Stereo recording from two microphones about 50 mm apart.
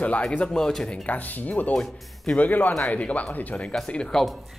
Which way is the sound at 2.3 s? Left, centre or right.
Left.